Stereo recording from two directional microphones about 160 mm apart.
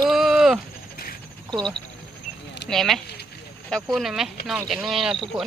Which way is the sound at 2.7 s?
Centre (ahead or behind).